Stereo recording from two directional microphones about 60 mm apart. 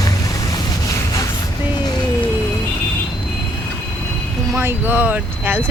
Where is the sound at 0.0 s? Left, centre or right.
Left.